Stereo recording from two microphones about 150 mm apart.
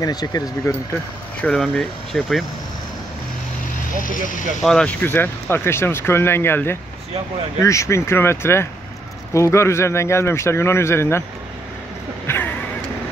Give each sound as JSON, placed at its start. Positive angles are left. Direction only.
{"t": 0.0, "sound": "speech", "side_deg": 25}
{"t": 1.4, "sound": "speech", "side_deg": 5}
{"t": 4.0, "sound": "speech", "side_deg": 65}
{"t": 4.6, "sound": "speech", "side_deg": 5}
{"t": 12.3, "sound": "a sound", "side_deg": 10}